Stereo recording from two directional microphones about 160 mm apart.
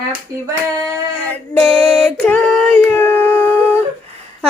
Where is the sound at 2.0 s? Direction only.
10° left (ahead or behind).